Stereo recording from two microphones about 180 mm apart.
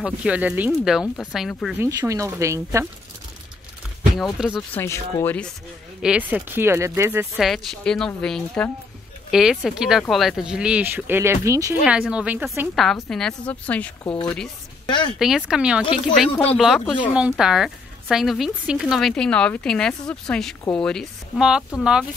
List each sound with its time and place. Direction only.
0.0 s speech: 5° right (ahead or behind)
1.8 s speech: 20° right (ahead or behind)
4.2 s speech: centre (ahead or behind)
4.7 s speech: 15° left (ahead or behind)
6.0 s speech: 5° right (ahead or behind)
7.3 s speech: centre (ahead or behind); by 11.7 s 15° right (ahead or behind)
11.8 s speech: 5° right (ahead or behind)
14.0 s speech: 30° left (ahead or behind)
15.1 s speech: 5° right (ahead or behind)